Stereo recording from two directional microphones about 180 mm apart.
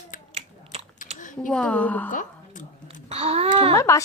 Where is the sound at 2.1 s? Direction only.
45° left (ahead or behind).